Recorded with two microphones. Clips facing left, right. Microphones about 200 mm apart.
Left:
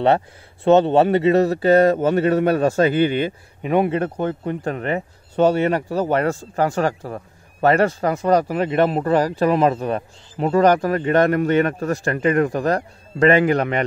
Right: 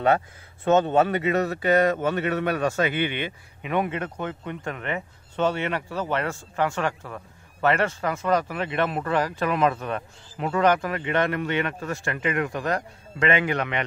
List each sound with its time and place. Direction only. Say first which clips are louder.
0.7 s speech: left 5 dB; 35° left (ahead or behind)